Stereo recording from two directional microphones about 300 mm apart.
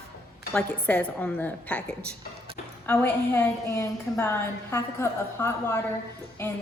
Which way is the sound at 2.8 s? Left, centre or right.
Centre.